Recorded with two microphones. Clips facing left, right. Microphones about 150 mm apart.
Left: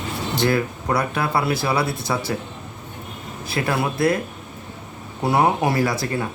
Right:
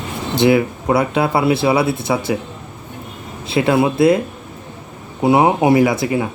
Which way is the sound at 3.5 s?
20° right (ahead or behind).